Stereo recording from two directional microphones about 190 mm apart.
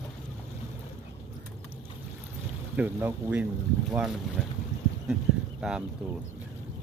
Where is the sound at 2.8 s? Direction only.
10° right (ahead or behind).